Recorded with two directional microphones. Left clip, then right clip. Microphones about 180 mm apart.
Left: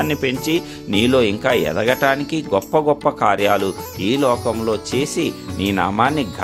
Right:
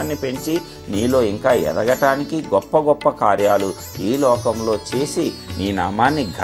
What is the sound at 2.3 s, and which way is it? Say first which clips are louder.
A man's voice: right 1 dB; 25° left (ahead or behind).